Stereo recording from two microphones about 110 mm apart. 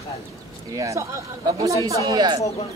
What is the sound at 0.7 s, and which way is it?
Speech, 30° right (ahead or behind).